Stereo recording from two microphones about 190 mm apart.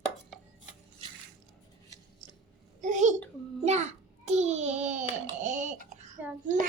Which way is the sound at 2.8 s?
40° right (ahead or behind).